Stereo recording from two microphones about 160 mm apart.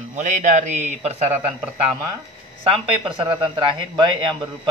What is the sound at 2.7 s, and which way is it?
Speech, 30° right (ahead or behind).